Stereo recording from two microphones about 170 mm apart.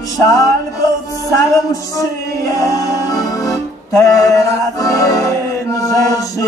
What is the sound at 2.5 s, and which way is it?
Music, 20° left (ahead or behind).